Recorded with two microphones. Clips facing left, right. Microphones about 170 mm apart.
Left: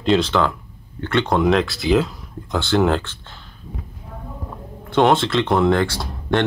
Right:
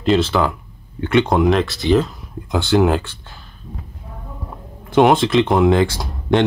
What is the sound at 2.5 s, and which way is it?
Speech, 15° right (ahead or behind).